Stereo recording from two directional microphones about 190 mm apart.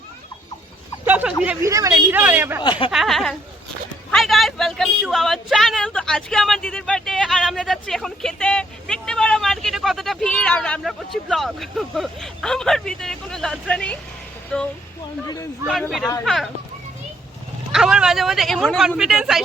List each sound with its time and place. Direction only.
1.0 s speech: 10° right (ahead or behind)
2.6 s speech: 25° left (ahead or behind)
2.9 s speech: centre (ahead or behind)
16.2 s speech: centre (ahead or behind)
17.7 s speech: 5° right (ahead or behind)